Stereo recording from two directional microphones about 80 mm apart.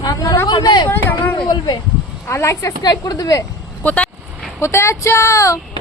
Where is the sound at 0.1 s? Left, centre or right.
Left.